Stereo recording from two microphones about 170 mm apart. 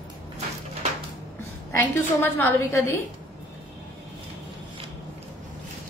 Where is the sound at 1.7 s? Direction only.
15° left (ahead or behind).